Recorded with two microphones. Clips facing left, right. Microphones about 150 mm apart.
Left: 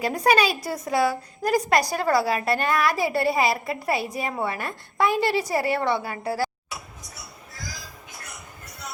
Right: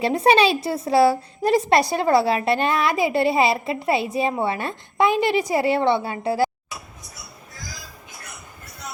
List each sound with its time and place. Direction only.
0.0 s a woman's voice: 25° right (ahead or behind)